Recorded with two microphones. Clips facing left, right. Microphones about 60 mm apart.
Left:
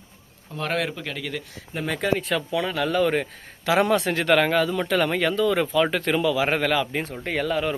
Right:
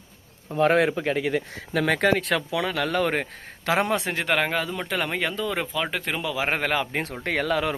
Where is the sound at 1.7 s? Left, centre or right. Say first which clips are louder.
Right 3 dB; right.